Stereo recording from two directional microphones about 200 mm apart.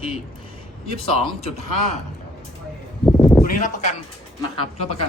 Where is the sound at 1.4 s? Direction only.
30° left (ahead or behind).